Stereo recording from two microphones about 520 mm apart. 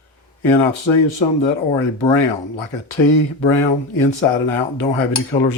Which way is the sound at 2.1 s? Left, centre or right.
Left.